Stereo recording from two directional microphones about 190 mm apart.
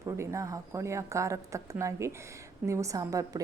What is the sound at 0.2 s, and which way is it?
A woman's voice, 15° right (ahead or behind).